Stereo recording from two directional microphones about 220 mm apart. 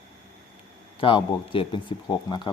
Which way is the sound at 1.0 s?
25° left (ahead or behind).